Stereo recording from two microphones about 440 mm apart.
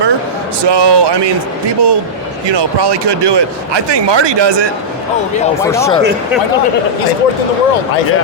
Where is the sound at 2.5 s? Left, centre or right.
Right.